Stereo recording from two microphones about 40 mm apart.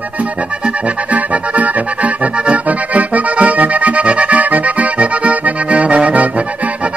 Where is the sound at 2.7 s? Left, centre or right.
Right.